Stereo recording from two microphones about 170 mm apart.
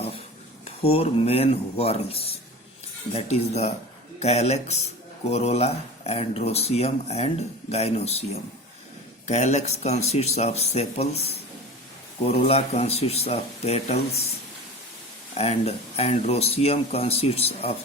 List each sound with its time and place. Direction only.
0.6 s speech: 35° left (ahead or behind)
15.4 s speech: 35° left (ahead or behind)